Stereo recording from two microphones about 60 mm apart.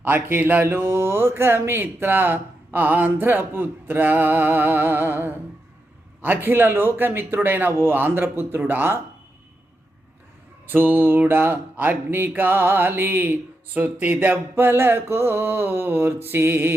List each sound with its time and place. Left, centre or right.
0.0 s mantra: right
10.7 s mantra: right